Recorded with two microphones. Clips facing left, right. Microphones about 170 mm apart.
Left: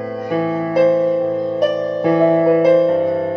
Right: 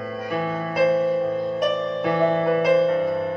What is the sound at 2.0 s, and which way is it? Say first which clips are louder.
Music: left 8 dB; 35° left (ahead or behind).